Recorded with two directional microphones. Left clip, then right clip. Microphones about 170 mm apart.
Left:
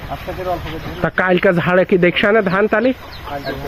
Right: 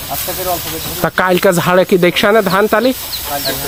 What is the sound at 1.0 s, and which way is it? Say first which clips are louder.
Speech: right 3 dB; 20° right (ahead or behind).